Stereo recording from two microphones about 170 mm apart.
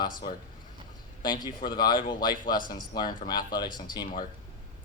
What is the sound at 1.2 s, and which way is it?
Speech, 25° left (ahead or behind).